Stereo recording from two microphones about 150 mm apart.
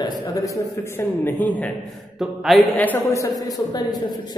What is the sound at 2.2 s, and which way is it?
Mantra, centre (ahead or behind).